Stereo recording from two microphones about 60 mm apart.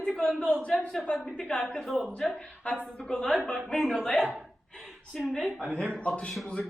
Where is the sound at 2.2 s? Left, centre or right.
Centre.